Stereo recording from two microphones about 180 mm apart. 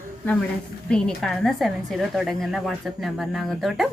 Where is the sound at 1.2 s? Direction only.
Centre (ahead or behind).